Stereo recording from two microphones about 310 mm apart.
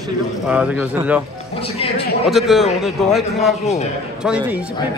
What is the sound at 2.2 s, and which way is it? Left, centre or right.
A man's voice, centre.